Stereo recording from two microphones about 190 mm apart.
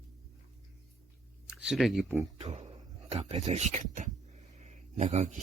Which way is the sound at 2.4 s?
35° right (ahead or behind).